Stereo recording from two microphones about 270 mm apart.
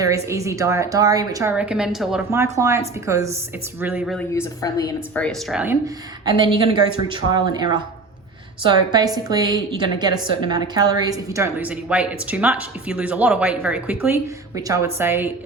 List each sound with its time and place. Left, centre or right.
0.0 s a woman's voice: centre
4.4 s a woman's voice: centre
4.9 s speech: centre
6.2 s a woman's voice: centre